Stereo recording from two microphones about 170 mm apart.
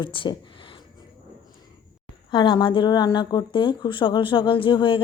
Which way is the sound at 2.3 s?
30° left (ahead or behind).